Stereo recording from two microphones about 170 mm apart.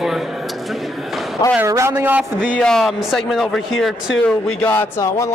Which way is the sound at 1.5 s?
15° right (ahead or behind).